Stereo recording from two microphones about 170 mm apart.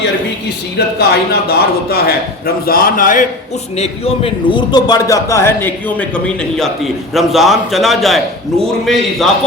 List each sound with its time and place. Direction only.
0.8 s a man's voice: 70° left (ahead or behind); by 3.2 s 50° left (ahead or behind)
3.8 s a man's voice: 35° left (ahead or behind); by 9.2 s centre (ahead or behind)